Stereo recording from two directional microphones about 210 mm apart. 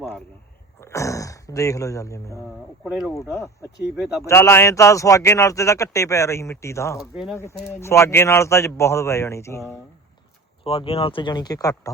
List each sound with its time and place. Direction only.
0.8 s speech: 15° left (ahead or behind)
2.8 s speech: centre (ahead or behind)
3.2 s speech: 15° left (ahead or behind)
3.9 s speech: 5° right (ahead or behind)
4.2 s speech: 10° left (ahead or behind)
10.6 s speech: 25° left (ahead or behind)